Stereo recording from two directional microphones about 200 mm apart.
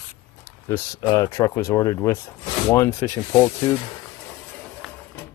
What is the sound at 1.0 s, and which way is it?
Speech, 20° left (ahead or behind).